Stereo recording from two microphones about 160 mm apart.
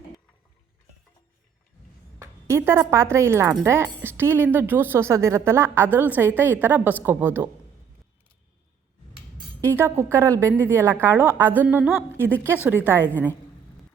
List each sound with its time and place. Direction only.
2.1 s speech: 15° right (ahead or behind)
9.6 s speech: 15° right (ahead or behind)